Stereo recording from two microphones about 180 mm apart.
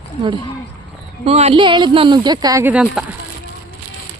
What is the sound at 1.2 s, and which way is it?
Speech, 35° right (ahead or behind).